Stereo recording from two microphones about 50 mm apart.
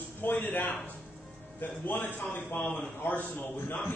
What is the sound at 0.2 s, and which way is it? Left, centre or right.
A man's voice, left.